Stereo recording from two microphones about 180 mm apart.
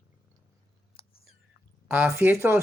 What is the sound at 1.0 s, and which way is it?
Chewing, 30° left (ahead or behind).